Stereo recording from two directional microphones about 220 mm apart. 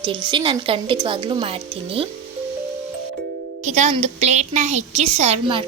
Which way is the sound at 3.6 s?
30° right (ahead or behind).